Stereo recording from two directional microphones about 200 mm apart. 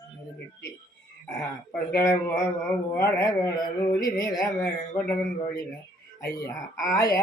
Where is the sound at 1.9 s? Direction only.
15° left (ahead or behind).